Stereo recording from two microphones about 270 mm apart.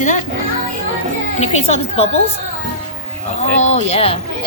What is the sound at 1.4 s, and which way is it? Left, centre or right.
Speech, left.